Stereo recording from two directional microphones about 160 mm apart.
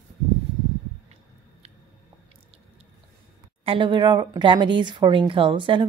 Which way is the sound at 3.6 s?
30° right (ahead or behind).